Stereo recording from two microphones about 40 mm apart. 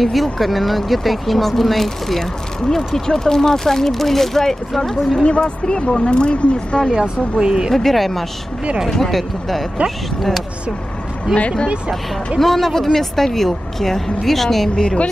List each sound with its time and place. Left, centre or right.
0.0 s speech: centre
5.2 s speech: left
7.0 s speech: centre
7.7 s speech: centre
12.4 s speech: centre